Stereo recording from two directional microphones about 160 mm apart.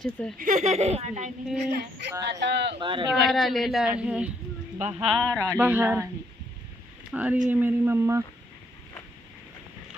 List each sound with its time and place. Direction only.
0.0 s speech: centre (ahead or behind)
0.3 s speech: 55° right (ahead or behind)
1.7 s speech: 90° right
2.8 s speech: 30° right (ahead or behind)
3.2 s speech: centre (ahead or behind)
5.4 s speech: 15° right (ahead or behind)
7.1 s speech: 10° right (ahead or behind)